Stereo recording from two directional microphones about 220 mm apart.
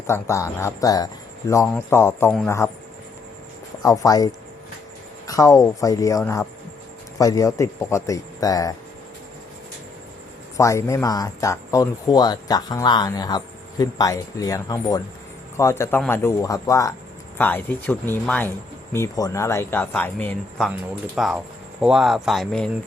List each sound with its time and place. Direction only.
0.1 s speech: 15° left (ahead or behind)
3.8 s speech: 15° left (ahead or behind)
10.6 s speech: 15° left (ahead or behind)